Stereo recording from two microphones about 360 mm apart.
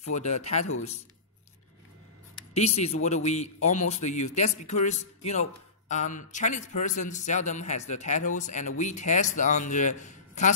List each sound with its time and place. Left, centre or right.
0.4 s speech: centre
2.5 s speech: centre